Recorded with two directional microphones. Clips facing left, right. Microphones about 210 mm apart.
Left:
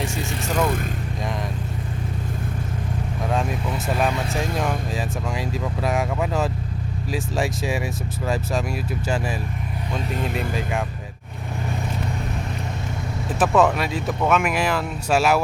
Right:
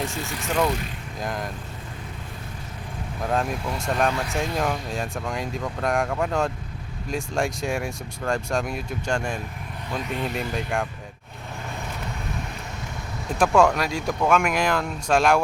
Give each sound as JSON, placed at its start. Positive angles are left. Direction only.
{"t": 0.3, "sound": "speech", "side_deg": 0}
{"t": 3.2, "sound": "speech", "side_deg": 0}
{"t": 10.0, "sound": "speech", "side_deg": 45}
{"t": 10.5, "sound": "speech", "side_deg": 0}
{"t": 13.4, "sound": "speech", "side_deg": 5}